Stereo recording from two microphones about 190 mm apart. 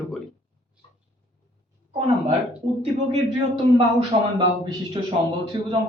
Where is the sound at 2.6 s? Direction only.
35° right (ahead or behind).